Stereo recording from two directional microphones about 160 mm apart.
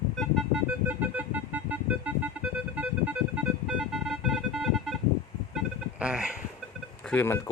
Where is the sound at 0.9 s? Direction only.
10° right (ahead or behind).